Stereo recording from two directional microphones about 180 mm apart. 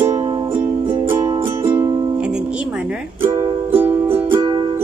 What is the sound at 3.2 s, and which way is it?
Music, 20° right (ahead or behind).